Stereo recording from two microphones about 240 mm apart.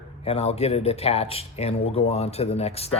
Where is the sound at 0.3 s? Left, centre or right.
Left.